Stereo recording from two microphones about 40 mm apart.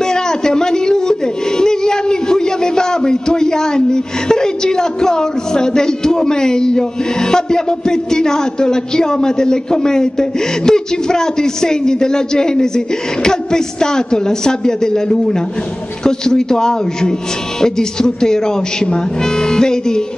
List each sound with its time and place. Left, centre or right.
0.0 s speech: centre